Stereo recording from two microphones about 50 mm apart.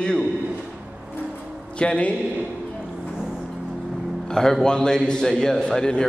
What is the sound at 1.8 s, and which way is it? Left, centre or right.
Speech, left.